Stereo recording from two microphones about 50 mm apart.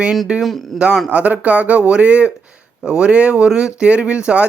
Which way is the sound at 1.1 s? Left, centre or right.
Right.